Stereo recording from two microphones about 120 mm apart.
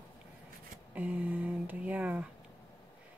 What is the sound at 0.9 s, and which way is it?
Speech, 15° right (ahead or behind).